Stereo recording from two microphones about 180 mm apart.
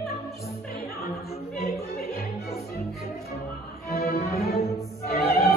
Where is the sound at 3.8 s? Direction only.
55° left (ahead or behind).